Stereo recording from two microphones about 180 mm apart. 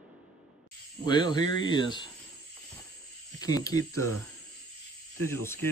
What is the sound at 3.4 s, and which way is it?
Speech, 20° left (ahead or behind).